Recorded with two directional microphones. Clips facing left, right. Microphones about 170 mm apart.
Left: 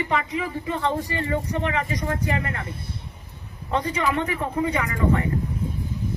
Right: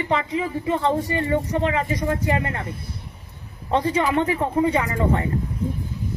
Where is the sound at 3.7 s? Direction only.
30° right (ahead or behind).